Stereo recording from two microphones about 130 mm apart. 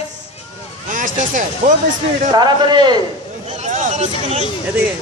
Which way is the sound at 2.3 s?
35° right (ahead or behind).